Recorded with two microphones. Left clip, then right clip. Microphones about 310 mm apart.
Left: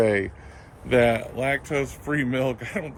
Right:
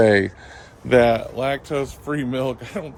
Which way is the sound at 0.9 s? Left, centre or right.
Centre.